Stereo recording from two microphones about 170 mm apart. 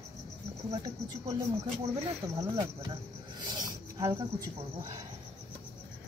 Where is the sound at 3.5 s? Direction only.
20° right (ahead or behind).